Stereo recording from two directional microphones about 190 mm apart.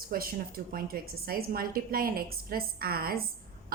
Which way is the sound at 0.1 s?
50° right (ahead or behind).